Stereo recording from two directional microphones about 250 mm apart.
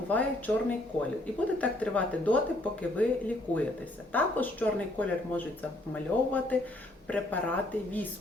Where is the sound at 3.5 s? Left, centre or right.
Centre.